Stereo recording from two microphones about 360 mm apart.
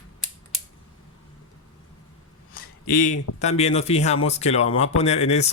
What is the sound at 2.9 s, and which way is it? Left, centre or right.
Speech, left.